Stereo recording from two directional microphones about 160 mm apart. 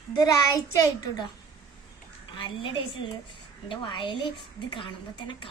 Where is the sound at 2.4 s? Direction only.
30° left (ahead or behind).